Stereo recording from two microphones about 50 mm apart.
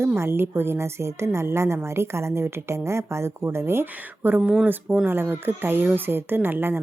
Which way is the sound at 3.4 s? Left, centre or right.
Right.